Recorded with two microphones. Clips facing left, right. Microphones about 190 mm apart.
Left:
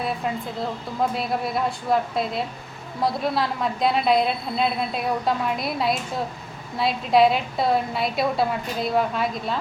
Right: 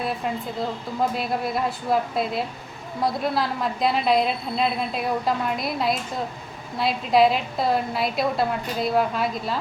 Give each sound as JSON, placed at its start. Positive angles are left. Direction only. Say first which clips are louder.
{"t": 1.1, "sound": "a woman's voice", "louder": "even", "side_deg": 0}